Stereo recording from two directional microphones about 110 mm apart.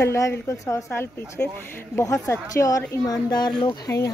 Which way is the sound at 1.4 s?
15° left (ahead or behind).